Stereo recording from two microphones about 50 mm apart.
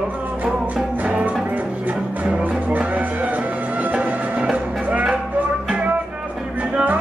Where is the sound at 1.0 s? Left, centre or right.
Right.